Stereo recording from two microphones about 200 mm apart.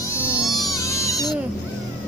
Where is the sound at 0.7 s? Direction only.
15° left (ahead or behind).